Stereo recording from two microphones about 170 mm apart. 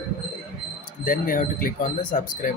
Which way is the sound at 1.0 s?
55° left (ahead or behind).